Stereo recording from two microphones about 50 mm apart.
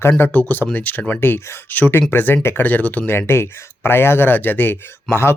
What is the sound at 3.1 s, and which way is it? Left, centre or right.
Speech, left.